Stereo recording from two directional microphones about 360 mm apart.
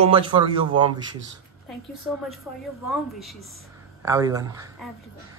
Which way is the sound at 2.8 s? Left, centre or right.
Centre.